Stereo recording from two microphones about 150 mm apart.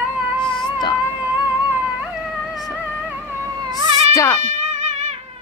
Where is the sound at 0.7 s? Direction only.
30° left (ahead or behind).